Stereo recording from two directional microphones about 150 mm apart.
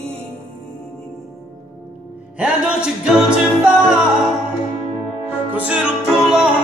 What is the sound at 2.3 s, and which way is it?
Music, 5° right (ahead or behind).